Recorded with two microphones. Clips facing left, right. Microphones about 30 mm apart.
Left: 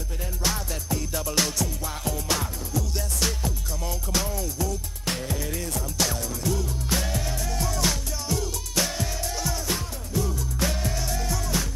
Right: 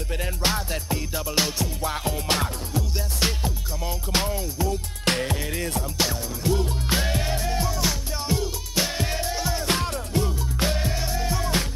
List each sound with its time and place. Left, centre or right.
0.4 s music: right
1.1 s music: centre
1.6 s music: right
5.0 s music: right
5.3 s music: right
7.6 s music: centre
8.3 s music: right
9.7 s music: right
10.2 s music: right
11.3 s music: right